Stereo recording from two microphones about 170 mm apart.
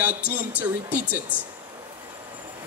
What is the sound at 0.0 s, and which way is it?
Speech, 10° right (ahead or behind).